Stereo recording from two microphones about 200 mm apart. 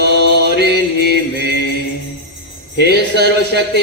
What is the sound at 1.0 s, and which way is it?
Speech, 55° right (ahead or behind).